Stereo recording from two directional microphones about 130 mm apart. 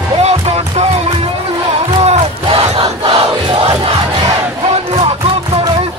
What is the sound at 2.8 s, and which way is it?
Crowd, 35° right (ahead or behind).